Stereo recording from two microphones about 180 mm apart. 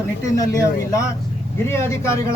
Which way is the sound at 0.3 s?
15° left (ahead or behind).